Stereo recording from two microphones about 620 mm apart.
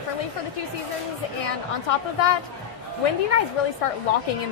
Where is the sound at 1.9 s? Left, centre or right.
Left.